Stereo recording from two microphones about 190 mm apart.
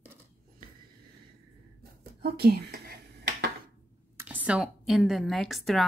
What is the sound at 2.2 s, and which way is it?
Speech, 55° right (ahead or behind).